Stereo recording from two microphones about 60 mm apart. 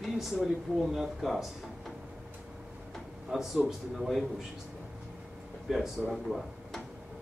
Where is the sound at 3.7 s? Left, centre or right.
Centre.